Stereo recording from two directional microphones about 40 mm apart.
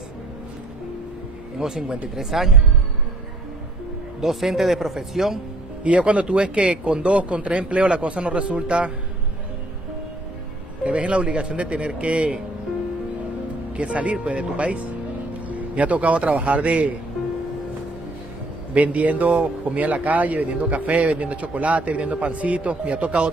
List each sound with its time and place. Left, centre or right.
1.6 s speech: centre
4.2 s speech: centre
5.9 s a man's voice: right
10.8 s a man's voice: right
13.7 s a man's voice: right
18.7 s a man's voice: right